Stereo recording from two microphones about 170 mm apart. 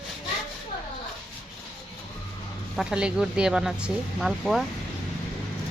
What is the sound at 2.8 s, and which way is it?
Speech, 5° right (ahead or behind).